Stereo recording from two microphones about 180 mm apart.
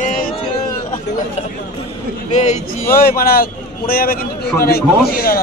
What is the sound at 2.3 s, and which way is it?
Speech, 40° left (ahead or behind).